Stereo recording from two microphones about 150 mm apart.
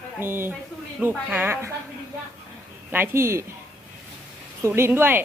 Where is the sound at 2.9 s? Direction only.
15° right (ahead or behind).